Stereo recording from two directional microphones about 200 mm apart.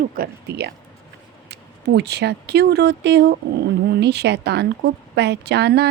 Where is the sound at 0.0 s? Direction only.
50° right (ahead or behind).